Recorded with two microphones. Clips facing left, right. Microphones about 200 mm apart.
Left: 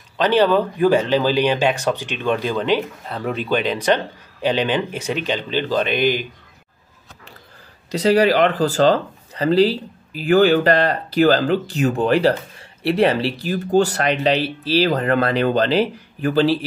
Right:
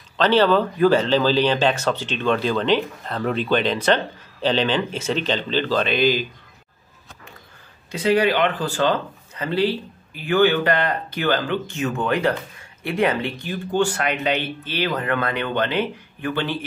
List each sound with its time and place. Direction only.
0.2 s speech: 15° left (ahead or behind)
7.9 s speech: 35° left (ahead or behind)